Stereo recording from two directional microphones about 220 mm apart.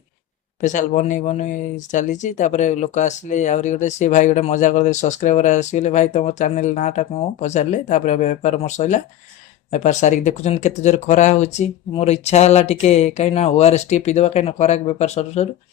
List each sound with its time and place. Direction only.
0.6 s speech: 35° left (ahead or behind)